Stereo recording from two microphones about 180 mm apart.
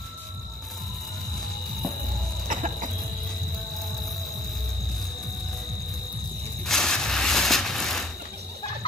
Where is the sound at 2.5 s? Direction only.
40° right (ahead or behind).